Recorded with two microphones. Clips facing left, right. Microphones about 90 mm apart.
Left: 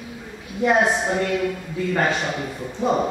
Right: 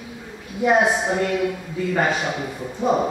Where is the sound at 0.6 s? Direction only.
5° right (ahead or behind).